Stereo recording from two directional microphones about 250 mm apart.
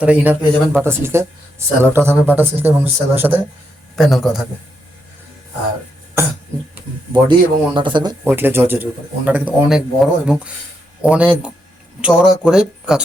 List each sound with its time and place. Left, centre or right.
0.0 s speech: centre
7.1 s speech: centre
8.2 s speech: centre